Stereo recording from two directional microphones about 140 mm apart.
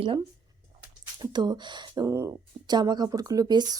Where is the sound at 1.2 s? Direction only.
30° right (ahead or behind).